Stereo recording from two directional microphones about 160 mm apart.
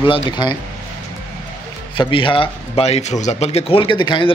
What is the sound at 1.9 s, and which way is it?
A man's voice, 30° left (ahead or behind).